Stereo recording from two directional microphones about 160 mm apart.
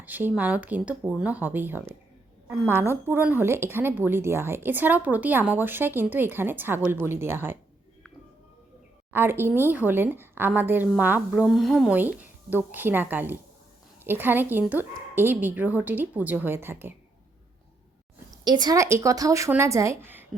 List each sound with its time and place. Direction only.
0.0 s a woman's voice: 10° right (ahead or behind)
9.1 s a woman's voice: 15° right (ahead or behind)
12.2 s a woman's voice: 10° right (ahead or behind)
18.3 s a woman's voice: 25° right (ahead or behind)